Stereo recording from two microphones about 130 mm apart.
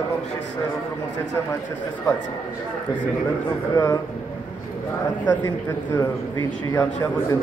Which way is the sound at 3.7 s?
25° left (ahead or behind).